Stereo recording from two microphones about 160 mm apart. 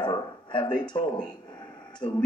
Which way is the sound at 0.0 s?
30° left (ahead or behind).